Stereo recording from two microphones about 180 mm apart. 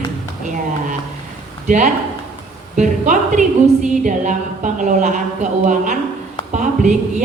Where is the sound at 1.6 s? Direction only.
40° right (ahead or behind).